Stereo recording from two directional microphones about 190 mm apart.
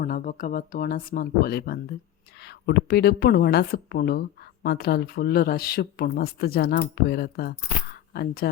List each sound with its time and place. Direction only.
0.0 s speech: 45° left (ahead or behind)